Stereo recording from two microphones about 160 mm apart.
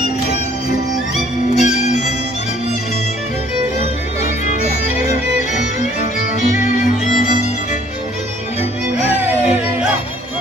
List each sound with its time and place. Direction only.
1.5 s music: 45° left (ahead or behind)
6.5 s music: 50° left (ahead or behind)